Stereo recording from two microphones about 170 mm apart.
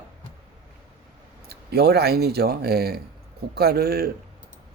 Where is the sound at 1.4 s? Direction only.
70° right (ahead or behind).